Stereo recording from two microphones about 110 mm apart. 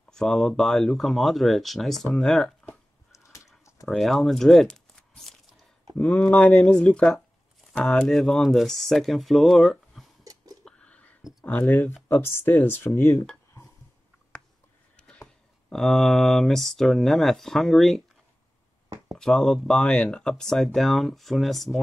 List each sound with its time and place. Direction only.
0.1 s speech: 5° left (ahead or behind)
3.1 s a sound: 30° left (ahead or behind)
3.8 s speech: centre (ahead or behind)
10.2 s whispering: 35° right (ahead or behind)
10.6 s a sound: 10° left (ahead or behind)
11.4 s speech: 15° left (ahead or behind)
13.0 s speech: 30° left (ahead or behind)
15.0 s a sound: 10° left (ahead or behind)
15.7 s speech: centre (ahead or behind)
19.1 s speech: 5° left (ahead or behind)